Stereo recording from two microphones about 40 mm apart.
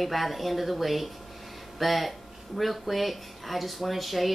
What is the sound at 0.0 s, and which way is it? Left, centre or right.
Speech, centre.